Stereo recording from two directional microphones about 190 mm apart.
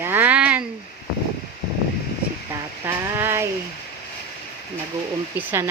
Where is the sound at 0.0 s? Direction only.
10° right (ahead or behind).